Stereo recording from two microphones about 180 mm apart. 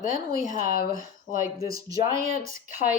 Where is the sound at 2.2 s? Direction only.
50° left (ahead or behind).